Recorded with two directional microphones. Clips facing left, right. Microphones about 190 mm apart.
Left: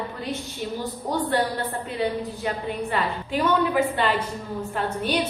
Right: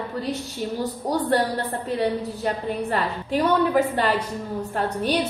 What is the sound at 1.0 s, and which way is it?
A woman's voice, 40° right (ahead or behind).